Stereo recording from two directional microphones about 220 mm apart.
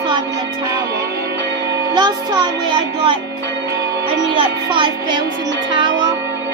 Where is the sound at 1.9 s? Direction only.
20° right (ahead or behind).